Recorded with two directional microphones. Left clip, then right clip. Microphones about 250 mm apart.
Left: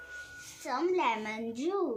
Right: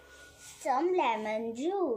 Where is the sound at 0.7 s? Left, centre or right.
Centre.